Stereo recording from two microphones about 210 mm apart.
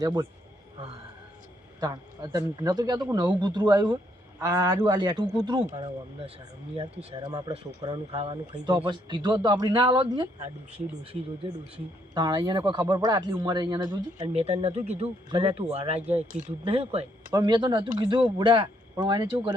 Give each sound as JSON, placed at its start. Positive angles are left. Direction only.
{"t": 0.0, "sound": "speech", "side_deg": -20}
{"t": 1.8, "sound": "a man's voice", "side_deg": -15}